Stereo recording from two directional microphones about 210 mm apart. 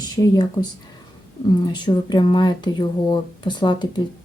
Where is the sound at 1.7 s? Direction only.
20° left (ahead or behind).